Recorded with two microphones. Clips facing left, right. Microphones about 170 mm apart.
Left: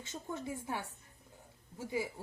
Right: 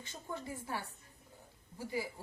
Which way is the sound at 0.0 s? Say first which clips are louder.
Left 3 dB; 20° left (ahead or behind).